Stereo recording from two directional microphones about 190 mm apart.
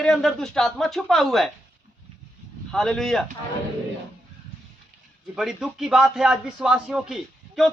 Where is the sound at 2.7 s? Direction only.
5° left (ahead or behind).